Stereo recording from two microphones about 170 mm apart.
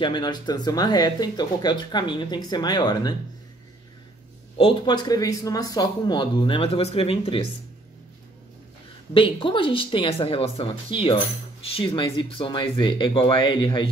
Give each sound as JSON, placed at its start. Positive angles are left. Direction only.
{"t": 0.0, "sound": "speech", "side_deg": 25}
{"t": 4.6, "sound": "speech", "side_deg": 25}
{"t": 9.1, "sound": "speech", "side_deg": 30}